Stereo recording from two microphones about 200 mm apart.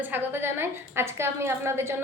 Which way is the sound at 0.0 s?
10° right (ahead or behind).